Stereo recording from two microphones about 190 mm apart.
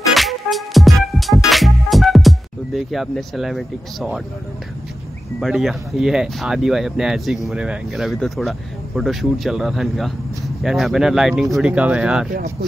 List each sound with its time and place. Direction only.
0.1 s music: centre (ahead or behind)
5.4 s speech: centre (ahead or behind)
12.3 s speech: 50° right (ahead or behind)